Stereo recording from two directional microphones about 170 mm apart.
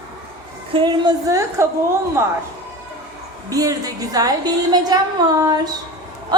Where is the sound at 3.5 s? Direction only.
20° right (ahead or behind).